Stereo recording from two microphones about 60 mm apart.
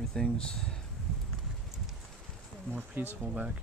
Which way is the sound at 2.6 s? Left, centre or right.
Right.